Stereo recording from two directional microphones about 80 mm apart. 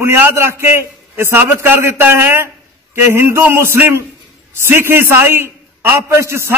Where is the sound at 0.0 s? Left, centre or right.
Right.